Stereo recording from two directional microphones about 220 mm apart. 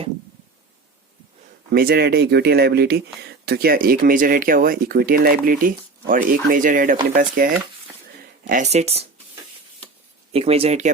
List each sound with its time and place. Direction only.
1.7 s speech: 45° right (ahead or behind)
10.3 s speech: 25° right (ahead or behind)